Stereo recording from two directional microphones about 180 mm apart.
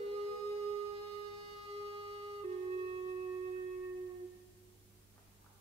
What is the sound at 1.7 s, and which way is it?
Music, 30° right (ahead or behind).